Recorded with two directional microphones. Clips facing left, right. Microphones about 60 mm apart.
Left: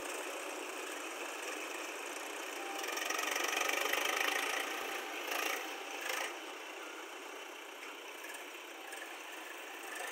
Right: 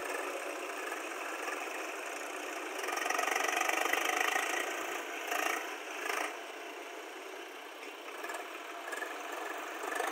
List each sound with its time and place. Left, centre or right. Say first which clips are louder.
2.8 s engine: right 6 dB; right
6.0 s wood: right 4 dB; right